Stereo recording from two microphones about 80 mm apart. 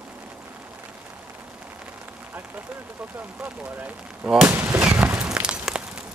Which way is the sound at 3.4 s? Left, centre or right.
Right.